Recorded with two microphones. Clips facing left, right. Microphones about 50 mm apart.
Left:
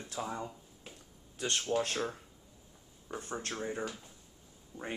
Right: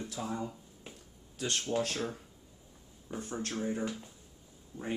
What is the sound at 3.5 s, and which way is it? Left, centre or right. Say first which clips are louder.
Speech: right 4 dB; centre.